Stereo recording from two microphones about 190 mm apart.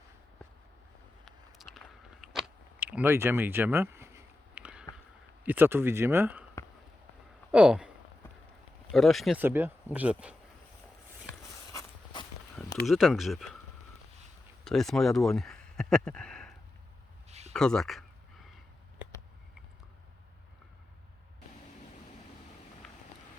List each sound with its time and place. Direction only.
1.2 s a sound: centre (ahead or behind)
5.4 s speech: 10° right (ahead or behind)
7.5 s speech: 5° right (ahead or behind)
8.9 s speech: centre (ahead or behind)
11.7 s walk: 15° left (ahead or behind)
12.8 s speech: centre (ahead or behind)
14.6 s speech: centre (ahead or behind)
17.2 s a sound: 35° right (ahead or behind)
17.5 s speech: 5° left (ahead or behind)
22.8 s vehicle: 5° left (ahead or behind)